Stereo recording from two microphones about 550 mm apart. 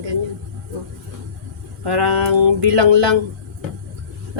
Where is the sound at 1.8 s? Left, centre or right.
Right.